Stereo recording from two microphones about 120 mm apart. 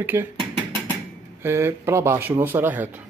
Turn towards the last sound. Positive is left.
turn(degrees=-15)  # may be behind; listen again after turning